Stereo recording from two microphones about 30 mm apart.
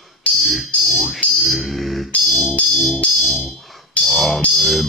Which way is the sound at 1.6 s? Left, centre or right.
Centre.